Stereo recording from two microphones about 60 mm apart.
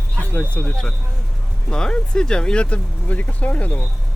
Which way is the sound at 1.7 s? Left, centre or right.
Centre.